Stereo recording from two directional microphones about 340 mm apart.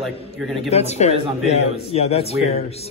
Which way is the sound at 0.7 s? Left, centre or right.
Centre.